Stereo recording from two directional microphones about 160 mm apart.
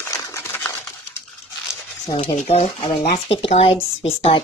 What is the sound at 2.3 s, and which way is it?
Speech, 45° left (ahead or behind).